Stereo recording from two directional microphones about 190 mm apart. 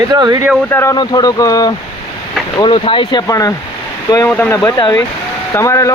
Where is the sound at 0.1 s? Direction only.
20° right (ahead or behind).